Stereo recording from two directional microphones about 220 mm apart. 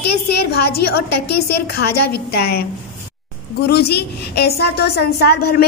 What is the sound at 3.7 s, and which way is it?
A woman's voice, 45° left (ahead or behind).